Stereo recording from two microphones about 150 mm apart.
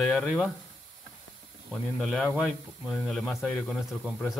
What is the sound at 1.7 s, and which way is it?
Speech, centre (ahead or behind).